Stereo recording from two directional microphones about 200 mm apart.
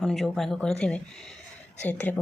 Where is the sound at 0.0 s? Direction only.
Centre (ahead or behind).